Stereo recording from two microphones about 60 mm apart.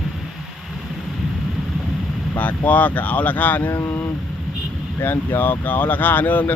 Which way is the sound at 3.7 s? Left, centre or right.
Left.